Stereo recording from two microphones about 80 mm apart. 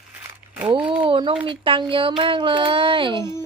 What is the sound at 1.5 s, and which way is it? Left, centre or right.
Speech, right.